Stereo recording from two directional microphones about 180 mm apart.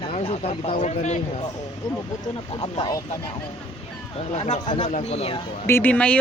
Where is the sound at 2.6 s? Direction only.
20° left (ahead or behind).